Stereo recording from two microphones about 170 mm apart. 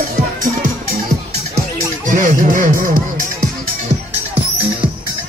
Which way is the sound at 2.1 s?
50° right (ahead or behind).